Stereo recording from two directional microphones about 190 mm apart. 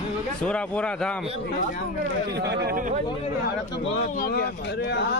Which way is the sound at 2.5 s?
55° right (ahead or behind).